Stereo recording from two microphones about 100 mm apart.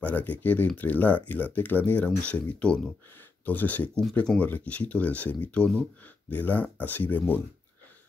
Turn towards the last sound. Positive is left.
turn(degrees=20)  # may be behind; listen again after turning